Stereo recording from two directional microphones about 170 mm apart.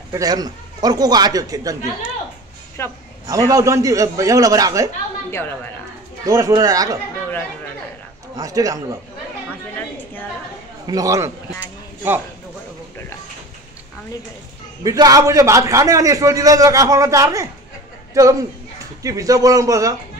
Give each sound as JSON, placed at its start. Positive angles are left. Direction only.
{"t": 0.1, "sound": "a man's voice", "side_deg": -20}
{"t": 2.8, "sound": "a man's voice", "side_deg": 15}
{"t": 3.3, "sound": "a man's voice", "side_deg": -20}
{"t": 6.2, "sound": "a man's voice", "side_deg": -20}
{"t": 8.4, "sound": "a man's voice", "side_deg": -20}
{"t": 10.9, "sound": "a man's voice", "side_deg": -20}
{"t": 11.6, "sound": "a sound", "side_deg": -10}
{"t": 14.8, "sound": "a man's voice", "side_deg": -20}